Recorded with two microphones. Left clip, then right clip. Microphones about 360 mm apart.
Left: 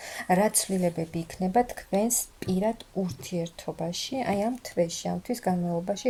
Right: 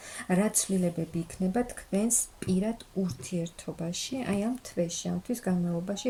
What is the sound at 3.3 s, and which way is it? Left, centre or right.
Speech, left.